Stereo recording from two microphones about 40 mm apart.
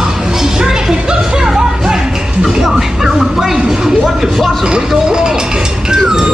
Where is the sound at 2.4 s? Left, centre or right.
Centre.